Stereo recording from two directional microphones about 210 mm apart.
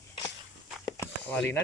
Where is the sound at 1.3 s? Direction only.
5° left (ahead or behind).